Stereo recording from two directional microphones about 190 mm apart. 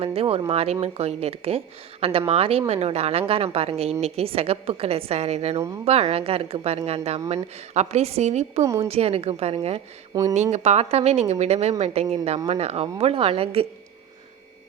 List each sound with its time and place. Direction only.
0.0 s speech: 30° right (ahead or behind)
8.6 s speech: 15° right (ahead or behind)
8.9 s speech: 30° right (ahead or behind)
10.1 s speech: 15° right (ahead or behind)
10.5 s speech: 35° right (ahead or behind)